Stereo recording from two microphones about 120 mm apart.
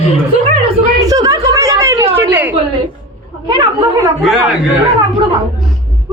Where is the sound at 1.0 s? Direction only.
30° right (ahead or behind).